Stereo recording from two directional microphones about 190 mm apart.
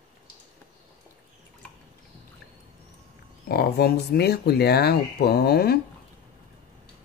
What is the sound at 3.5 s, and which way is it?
Speech, 55° left (ahead or behind).